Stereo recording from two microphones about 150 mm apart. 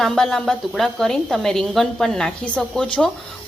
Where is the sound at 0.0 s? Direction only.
Centre (ahead or behind).